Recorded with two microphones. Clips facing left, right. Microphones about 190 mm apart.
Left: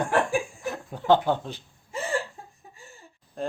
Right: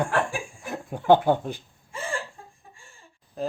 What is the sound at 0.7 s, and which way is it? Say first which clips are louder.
Speech: right 3 dB; 15° right (ahead or behind).